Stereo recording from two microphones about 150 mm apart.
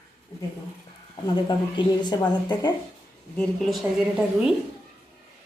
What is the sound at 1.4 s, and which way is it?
Speech, 30° left (ahead or behind).